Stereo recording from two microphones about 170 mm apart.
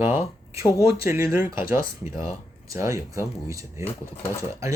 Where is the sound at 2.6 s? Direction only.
20° right (ahead or behind).